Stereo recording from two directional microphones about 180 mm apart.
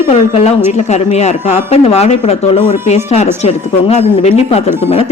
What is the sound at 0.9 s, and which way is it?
A woman's voice, 40° left (ahead or behind).